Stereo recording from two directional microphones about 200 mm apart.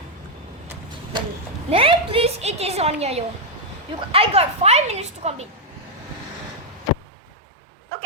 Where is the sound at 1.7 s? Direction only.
25° right (ahead or behind).